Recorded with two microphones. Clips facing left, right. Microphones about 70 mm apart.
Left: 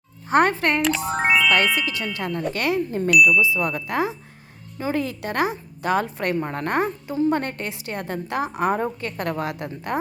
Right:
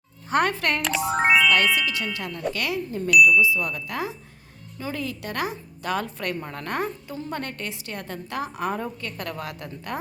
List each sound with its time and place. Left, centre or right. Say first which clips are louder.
0.3 s a woman's voice: left 4 dB; left
0.8 s speech: left 1 dB; centre
1.5 s a woman's voice: left 1 dB; left
8.7 s a woman's voice: left 6 dB; left